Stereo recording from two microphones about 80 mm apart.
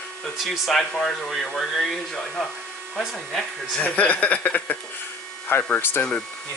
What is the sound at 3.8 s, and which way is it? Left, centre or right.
Speech, centre.